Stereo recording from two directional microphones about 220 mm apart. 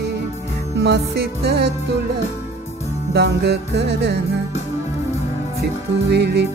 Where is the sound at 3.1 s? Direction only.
50° right (ahead or behind).